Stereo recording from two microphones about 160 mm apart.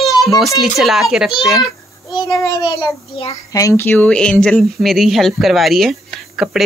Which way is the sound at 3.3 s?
20° left (ahead or behind).